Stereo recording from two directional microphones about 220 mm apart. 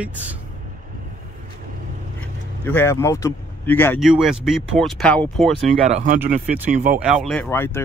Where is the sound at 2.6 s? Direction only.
10° left (ahead or behind).